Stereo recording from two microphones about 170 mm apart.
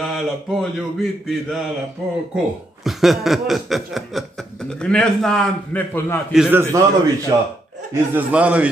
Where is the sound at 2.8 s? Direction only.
Centre (ahead or behind).